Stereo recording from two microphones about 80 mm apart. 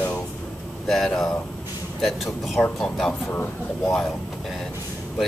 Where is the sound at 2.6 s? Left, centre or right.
Centre.